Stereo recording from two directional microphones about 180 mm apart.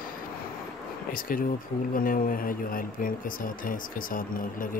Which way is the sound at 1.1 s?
50° left (ahead or behind).